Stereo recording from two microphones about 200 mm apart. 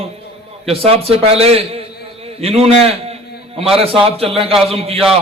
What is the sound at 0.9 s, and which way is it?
A man's voice, 30° right (ahead or behind).